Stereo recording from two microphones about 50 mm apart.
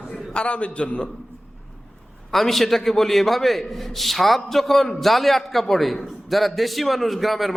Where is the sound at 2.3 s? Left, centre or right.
Centre.